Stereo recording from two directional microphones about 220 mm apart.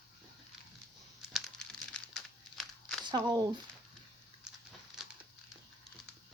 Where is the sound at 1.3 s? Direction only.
Centre (ahead or behind).